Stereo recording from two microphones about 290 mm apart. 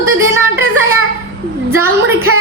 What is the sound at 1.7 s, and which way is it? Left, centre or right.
Speech, centre.